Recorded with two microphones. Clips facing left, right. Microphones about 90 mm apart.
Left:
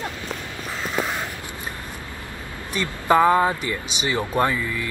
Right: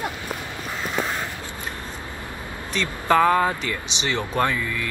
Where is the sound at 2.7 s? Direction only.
15° left (ahead or behind).